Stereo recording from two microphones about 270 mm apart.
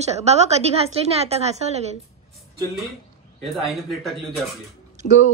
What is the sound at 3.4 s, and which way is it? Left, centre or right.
Speech, centre.